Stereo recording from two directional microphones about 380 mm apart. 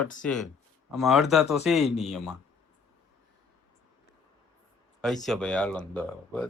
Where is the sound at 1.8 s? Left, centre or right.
Centre.